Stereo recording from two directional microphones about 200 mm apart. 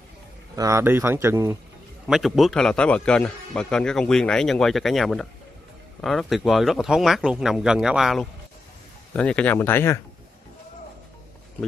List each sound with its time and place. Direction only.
0.6 s speech: 15° right (ahead or behind)
2.0 s a man's voice: centre (ahead or behind)